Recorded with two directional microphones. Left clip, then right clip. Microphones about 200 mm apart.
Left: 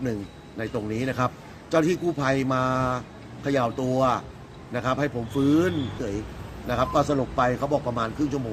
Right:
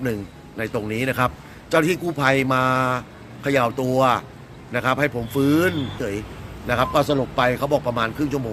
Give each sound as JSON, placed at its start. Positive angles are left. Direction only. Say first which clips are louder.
{"t": 0.0, "sound": "a man's voice", "louder": "right 4 dB", "side_deg": -5}